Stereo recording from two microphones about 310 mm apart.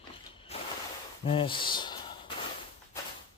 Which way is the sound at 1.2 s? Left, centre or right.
Centre.